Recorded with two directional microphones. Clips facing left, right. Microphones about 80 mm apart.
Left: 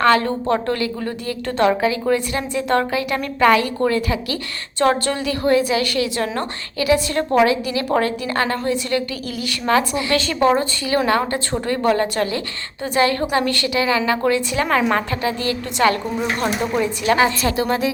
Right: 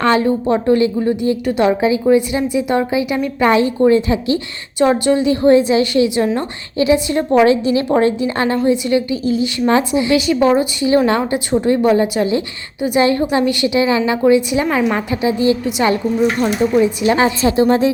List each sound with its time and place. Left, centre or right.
0.0 s a woman's voice: right